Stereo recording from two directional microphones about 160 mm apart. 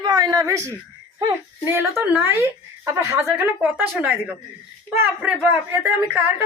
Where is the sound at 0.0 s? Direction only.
25° right (ahead or behind).